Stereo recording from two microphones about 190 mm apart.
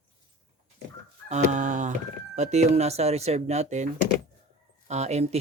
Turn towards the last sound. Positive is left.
turn(degrees=-35)  # may be behind; listen again after turning